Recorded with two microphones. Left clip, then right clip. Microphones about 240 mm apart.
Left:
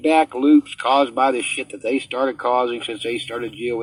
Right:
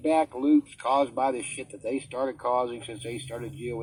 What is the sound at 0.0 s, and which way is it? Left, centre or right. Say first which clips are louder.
Speech: left 8 dB; left.